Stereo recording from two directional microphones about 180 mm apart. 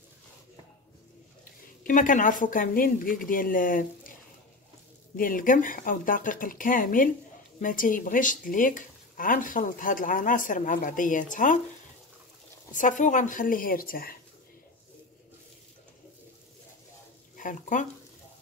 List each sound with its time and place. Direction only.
1.8 s speech: 45° left (ahead or behind)
5.1 s speech: 50° left (ahead or behind)
12.7 s speech: 45° left (ahead or behind)
17.4 s speech: 45° left (ahead or behind)